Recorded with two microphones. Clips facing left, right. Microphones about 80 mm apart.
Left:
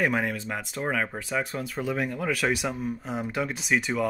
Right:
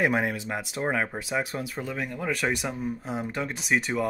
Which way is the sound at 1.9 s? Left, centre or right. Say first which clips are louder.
Left 4 dB; centre.